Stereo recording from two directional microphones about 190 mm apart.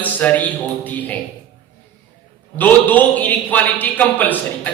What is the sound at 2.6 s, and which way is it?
A man's voice, 10° left (ahead or behind).